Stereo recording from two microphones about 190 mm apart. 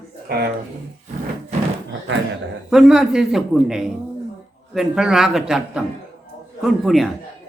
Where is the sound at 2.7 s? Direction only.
5° right (ahead or behind).